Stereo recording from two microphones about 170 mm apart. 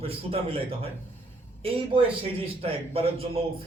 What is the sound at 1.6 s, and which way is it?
Speech, 30° right (ahead or behind).